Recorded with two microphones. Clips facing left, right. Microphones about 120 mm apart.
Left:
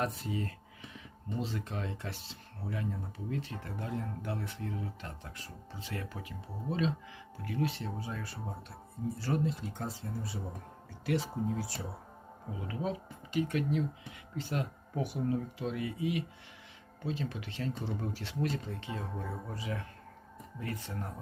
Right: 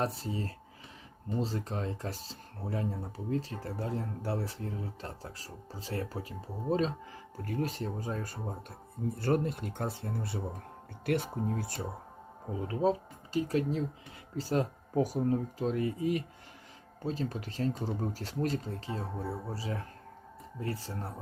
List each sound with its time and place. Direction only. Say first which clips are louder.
0.0 s speech: right 1 dB; 35° right (ahead or behind)
9.1 s speech: right 4 dB; 55° right (ahead or behind)
12.5 s speech: right 7 dB; 35° right (ahead or behind)